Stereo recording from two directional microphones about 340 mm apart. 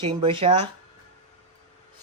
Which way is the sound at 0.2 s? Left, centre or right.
Centre.